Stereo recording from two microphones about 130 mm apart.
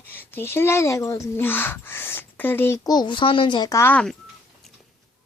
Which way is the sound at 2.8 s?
35° left (ahead or behind).